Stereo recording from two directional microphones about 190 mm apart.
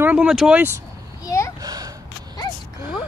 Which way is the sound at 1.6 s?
20° right (ahead or behind).